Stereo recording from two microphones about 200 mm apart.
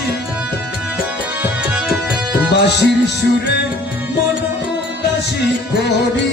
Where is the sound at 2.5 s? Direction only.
60° left (ahead or behind).